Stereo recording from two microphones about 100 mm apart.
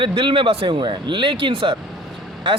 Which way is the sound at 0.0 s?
55° right (ahead or behind).